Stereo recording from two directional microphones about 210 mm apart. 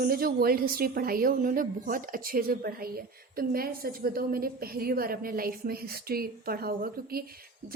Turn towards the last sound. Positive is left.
turn(degrees=-45)  # may be behind; listen again after turning